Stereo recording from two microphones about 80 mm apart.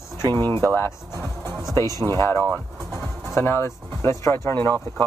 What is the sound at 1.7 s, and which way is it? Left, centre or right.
Speech, right.